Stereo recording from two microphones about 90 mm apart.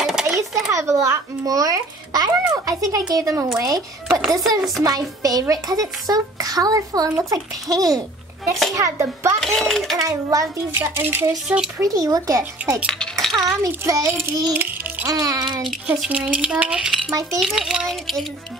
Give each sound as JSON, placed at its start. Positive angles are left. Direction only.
{"t": 0.0, "sound": "a sound", "side_deg": -5}
{"t": 0.7, "sound": "a child's voice", "side_deg": -35}
{"t": 4.1, "sound": "a child's voice", "side_deg": 5}
{"t": 4.8, "sound": "a child's voice", "side_deg": -45}
{"t": 9.4, "sound": "a child's voice", "side_deg": 5}
{"t": 9.9, "sound": "a child's voice", "side_deg": -40}
{"t": 10.8, "sound": "speech", "side_deg": -25}
{"t": 11.4, "sound": "speech", "side_deg": -10}
{"t": 11.8, "sound": "a child's voice", "side_deg": -40}
{"t": 13.0, "sound": "chink", "side_deg": 5}
{"t": 13.6, "sound": "a child's voice", "side_deg": -35}
{"t": 14.6, "sound": "music", "side_deg": -20}
{"t": 15.0, "sound": "a child's voice", "side_deg": -40}
{"t": 16.1, "sound": "a child's voice", "side_deg": -15}